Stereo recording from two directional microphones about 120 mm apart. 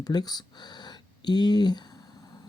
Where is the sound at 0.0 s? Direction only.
35° left (ahead or behind).